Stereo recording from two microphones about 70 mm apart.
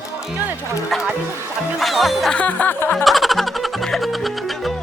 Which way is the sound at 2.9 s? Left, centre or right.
Centre.